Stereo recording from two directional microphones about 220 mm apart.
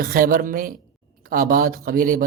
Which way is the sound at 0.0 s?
40° right (ahead or behind).